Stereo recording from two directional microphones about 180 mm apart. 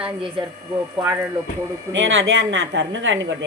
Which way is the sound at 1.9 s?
90° right.